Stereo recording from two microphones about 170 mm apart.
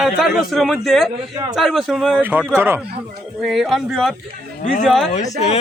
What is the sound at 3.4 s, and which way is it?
A man's voice, centre (ahead or behind).